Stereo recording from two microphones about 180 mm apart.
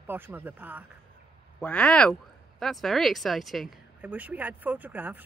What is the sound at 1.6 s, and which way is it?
A woman's voice, 5° left (ahead or behind).